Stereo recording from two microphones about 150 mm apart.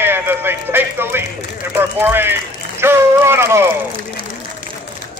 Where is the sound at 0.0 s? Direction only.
15° right (ahead or behind).